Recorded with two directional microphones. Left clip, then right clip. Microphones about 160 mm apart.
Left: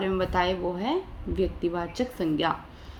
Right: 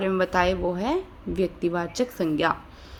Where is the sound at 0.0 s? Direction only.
35° right (ahead or behind).